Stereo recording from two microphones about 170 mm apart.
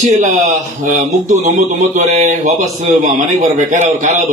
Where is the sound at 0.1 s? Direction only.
45° right (ahead or behind).